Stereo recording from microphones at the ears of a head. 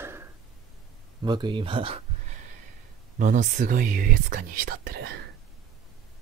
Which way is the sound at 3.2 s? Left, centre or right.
Right.